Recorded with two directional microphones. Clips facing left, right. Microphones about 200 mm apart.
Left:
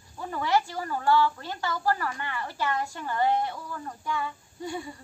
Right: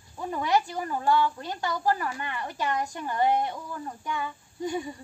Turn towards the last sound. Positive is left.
turn(degrees=-15)  # may be behind; listen again after turning